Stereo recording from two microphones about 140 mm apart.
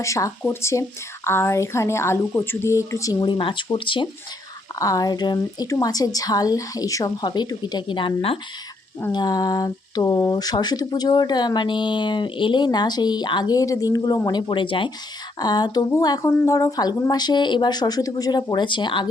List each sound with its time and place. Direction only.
0.0 s speech: 20° left (ahead or behind)
4.8 s speech: 25° left (ahead or behind); by 8.4 s 40° left (ahead or behind)
9.1 s speech: 30° left (ahead or behind)